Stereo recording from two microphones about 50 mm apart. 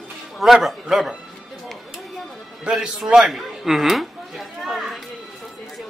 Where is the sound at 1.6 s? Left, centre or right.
Centre.